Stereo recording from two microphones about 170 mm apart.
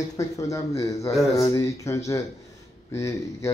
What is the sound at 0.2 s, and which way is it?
Speech, 20° left (ahead or behind).